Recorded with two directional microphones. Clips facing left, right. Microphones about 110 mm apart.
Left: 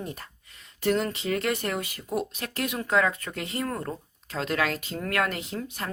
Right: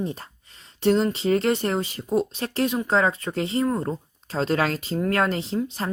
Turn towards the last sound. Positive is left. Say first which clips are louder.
# right 7 dB
turn(degrees=-30)  # may be behind; listen again after turning